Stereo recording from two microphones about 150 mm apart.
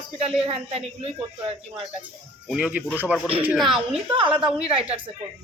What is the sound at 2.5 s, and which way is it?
A man's voice, 5° right (ahead or behind).